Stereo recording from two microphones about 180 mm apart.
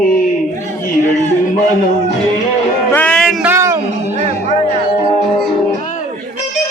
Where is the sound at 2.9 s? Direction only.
5° left (ahead or behind).